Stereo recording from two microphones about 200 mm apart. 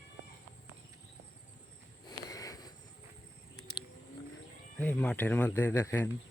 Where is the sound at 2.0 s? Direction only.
15° left (ahead or behind).